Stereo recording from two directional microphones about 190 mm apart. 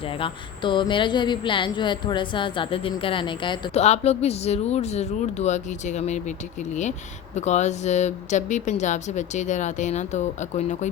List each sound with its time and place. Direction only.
0.1 s a woman's voice: 25° left (ahead or behind)
7.3 s speech: 35° left (ahead or behind)